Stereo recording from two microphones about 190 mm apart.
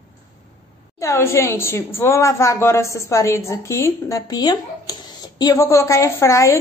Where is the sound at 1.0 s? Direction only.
15° left (ahead or behind).